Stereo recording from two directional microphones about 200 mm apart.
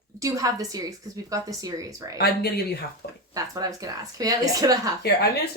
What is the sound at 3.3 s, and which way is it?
A woman's voice, 20° right (ahead or behind).